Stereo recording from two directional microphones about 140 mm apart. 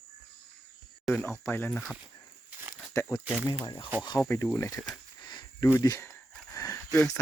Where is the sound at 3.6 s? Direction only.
30° left (ahead or behind).